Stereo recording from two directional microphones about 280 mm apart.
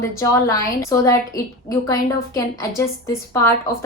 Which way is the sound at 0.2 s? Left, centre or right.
Centre.